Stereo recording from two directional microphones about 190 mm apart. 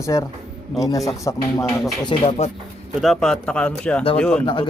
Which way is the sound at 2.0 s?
30° left (ahead or behind).